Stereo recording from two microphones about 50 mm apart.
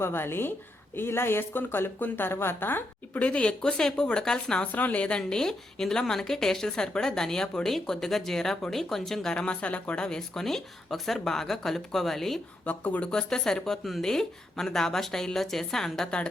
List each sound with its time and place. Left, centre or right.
0.0 s speech: left
3.2 s speech: left
3.6 s a woman's voice: centre
4.6 s a woman's voice: left; by 9.3 s centre
9.3 s a woman's voice: centre
12.6 s speech: left
13.1 s a woman's voice: centre